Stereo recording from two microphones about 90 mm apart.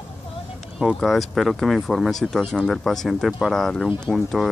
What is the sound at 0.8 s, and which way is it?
Speech, centre (ahead or behind).